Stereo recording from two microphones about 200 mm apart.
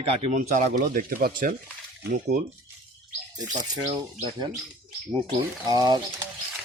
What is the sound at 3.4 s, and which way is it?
Speech, 20° right (ahead or behind).